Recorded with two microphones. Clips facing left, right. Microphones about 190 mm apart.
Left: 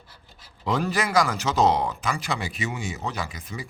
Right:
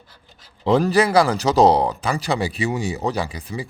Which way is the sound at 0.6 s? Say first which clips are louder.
Right 9 dB; 35° right (ahead or behind).